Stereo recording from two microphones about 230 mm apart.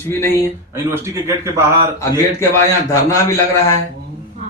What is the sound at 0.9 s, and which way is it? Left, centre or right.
Speech, centre.